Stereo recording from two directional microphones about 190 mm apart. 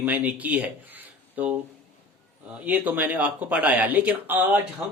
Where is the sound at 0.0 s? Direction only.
10° right (ahead or behind).